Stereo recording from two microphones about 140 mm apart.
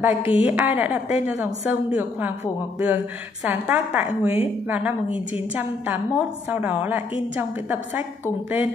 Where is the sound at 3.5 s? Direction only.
10° right (ahead or behind).